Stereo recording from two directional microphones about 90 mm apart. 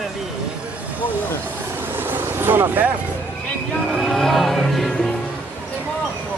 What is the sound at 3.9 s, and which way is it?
Music, 5° left (ahead or behind).